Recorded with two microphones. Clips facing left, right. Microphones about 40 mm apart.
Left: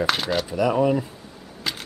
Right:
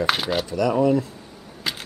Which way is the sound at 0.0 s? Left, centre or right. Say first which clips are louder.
Right 1 dB; centre.